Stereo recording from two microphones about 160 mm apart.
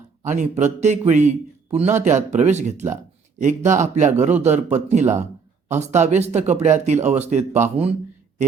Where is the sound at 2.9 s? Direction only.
50° right (ahead or behind).